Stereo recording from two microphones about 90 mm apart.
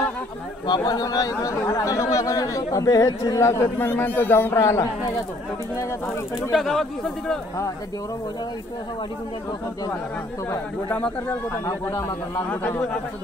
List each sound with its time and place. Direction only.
0.7 s speech: 50° left (ahead or behind); by 4.6 s 25° left (ahead or behind)
4.6 s speech: 35° left (ahead or behind)
6.5 s speech: centre (ahead or behind)
10.9 s speech: 15° left (ahead or behind)
12.4 s a man's voice: 20° left (ahead or behind)